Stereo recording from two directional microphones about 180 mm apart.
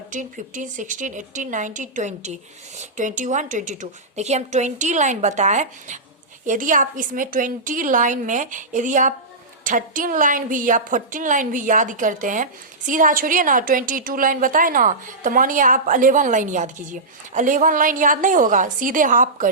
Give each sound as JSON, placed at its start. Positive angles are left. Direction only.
{"t": 0.1, "sound": "a woman's voice", "side_deg": -45}